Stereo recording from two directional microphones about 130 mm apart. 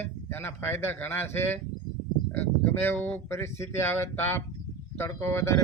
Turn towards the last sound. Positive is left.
turn(degrees=20)  # may be behind; listen again after turning